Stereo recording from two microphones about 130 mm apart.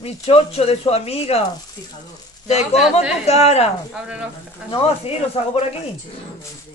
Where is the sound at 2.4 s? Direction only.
55° left (ahead or behind).